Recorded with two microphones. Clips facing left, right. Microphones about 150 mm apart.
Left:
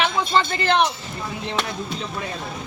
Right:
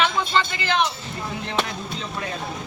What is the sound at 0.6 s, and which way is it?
Speech, 60° left (ahead or behind).